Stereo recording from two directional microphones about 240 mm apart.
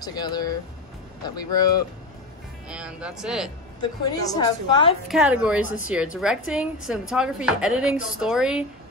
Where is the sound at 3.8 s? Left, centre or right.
Centre.